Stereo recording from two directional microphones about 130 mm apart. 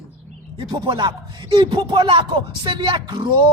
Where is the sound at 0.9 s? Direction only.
35° right (ahead or behind).